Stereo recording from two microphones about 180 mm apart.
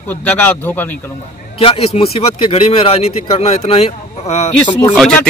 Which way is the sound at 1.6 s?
35° left (ahead or behind).